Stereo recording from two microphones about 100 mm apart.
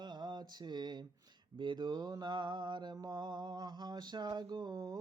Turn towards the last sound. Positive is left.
turn(degrees=-40)  # may be behind; listen again after turning